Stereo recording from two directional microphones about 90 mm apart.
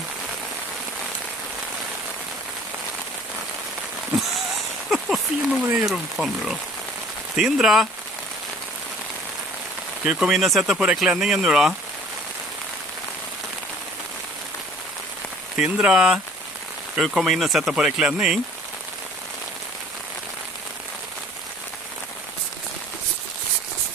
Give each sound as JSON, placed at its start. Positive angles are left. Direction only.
{"t": 4.8, "sound": "a sound", "side_deg": 0}
{"t": 5.8, "sound": "speech", "side_deg": -5}
{"t": 10.0, "sound": "speech", "side_deg": -10}
{"t": 15.5, "sound": "speech", "side_deg": -10}